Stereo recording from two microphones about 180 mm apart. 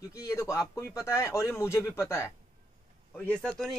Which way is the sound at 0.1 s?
15° left (ahead or behind).